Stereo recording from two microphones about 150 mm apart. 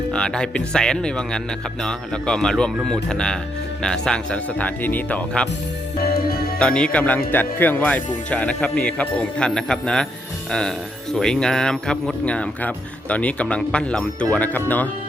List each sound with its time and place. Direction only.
0.1 s speech: 5° left (ahead or behind)
6.1 s music: 90° left
6.6 s speech: 5° left (ahead or behind)
11.1 s speech: 5° left (ahead or behind)